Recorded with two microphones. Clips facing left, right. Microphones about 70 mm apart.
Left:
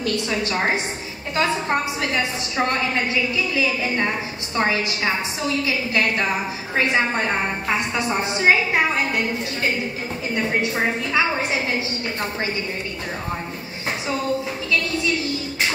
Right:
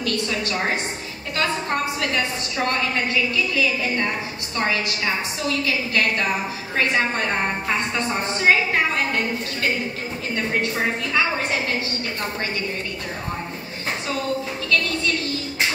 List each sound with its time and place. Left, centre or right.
0.0 s a woman's voice: left
10.3 s a woman's voice: centre
14.7 s a woman's voice: centre